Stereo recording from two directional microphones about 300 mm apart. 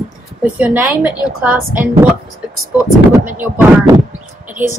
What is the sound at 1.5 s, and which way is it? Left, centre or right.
Speech, right.